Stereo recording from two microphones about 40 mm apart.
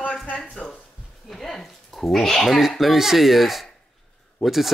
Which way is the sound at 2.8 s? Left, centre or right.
Centre.